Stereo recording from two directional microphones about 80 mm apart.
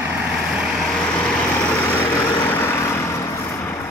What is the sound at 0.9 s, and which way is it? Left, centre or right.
Vehicle, centre.